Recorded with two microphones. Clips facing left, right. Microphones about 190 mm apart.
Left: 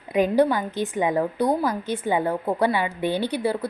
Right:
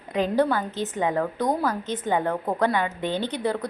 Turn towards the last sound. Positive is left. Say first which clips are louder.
# left 2 dB
turn(degrees=10)  # may be behind; listen again after turning